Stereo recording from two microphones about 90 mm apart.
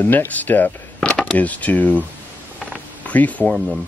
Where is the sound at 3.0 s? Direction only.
15° left (ahead or behind).